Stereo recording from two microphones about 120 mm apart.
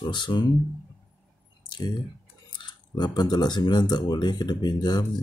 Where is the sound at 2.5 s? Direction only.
40° left (ahead or behind).